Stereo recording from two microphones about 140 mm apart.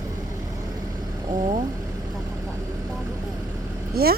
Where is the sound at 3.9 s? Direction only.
90° right.